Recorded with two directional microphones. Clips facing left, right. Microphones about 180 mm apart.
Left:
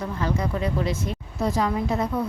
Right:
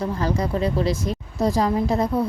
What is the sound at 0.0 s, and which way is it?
A woman's voice, 35° right (ahead or behind).